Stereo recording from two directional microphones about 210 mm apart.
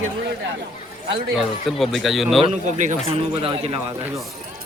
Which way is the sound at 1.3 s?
Centre (ahead or behind).